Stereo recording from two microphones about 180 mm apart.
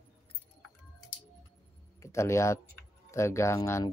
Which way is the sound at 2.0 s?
15° left (ahead or behind).